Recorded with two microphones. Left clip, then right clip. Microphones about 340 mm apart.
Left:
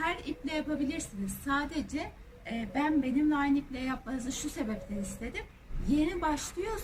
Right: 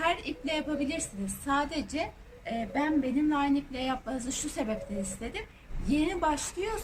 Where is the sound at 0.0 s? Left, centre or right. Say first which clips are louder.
Right 4 dB; centre.